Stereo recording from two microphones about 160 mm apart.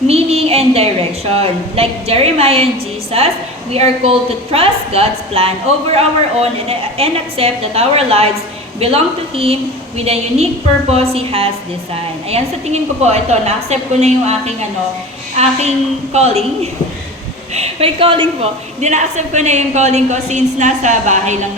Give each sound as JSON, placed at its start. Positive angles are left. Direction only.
{"t": 0.1, "sound": "a woman's voice", "side_deg": -40}
{"t": 16.1, "sound": "a woman's voice", "side_deg": -40}
{"t": 17.5, "sound": "a woman's voice", "side_deg": -40}
{"t": 18.8, "sound": "a woman's voice", "side_deg": -45}